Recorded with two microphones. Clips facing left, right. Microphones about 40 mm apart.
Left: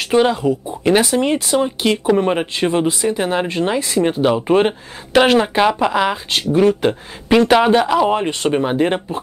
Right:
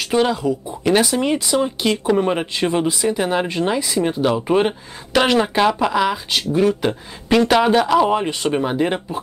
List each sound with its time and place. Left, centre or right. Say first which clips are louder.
0.1 s speech: left 3 dB; centre
0.4 s speech: left 3 dB; left
0.8 s speech: left 2 dB; centre